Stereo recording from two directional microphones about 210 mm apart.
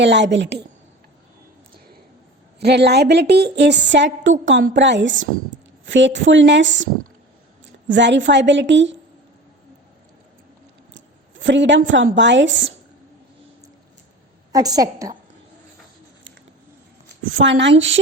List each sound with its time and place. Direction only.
0.0 s a woman's voice: 55° right (ahead or behind)
2.6 s a woman's voice: 50° right (ahead or behind)
10.9 s a sound: 60° right (ahead or behind)
11.9 s a woman's voice: 60° right (ahead or behind)
14.5 s a woman's voice: 15° right (ahead or behind)
17.2 s a woman's voice: 65° right (ahead or behind)